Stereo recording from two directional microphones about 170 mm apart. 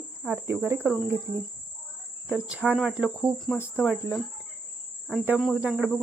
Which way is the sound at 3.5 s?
15° left (ahead or behind).